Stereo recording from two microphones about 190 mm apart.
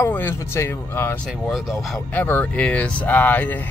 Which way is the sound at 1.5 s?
Centre (ahead or behind).